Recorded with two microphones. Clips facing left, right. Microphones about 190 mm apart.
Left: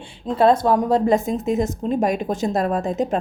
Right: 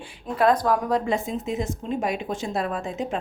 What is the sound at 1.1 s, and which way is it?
A woman's voice, 45° left (ahead or behind).